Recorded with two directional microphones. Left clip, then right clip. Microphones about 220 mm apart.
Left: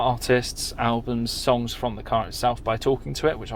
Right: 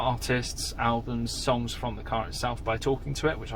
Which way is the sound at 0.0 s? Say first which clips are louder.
Left 7 dB; 45° left (ahead or behind).